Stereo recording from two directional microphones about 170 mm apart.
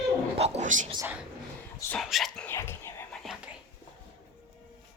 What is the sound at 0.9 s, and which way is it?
Speech, 10° right (ahead or behind).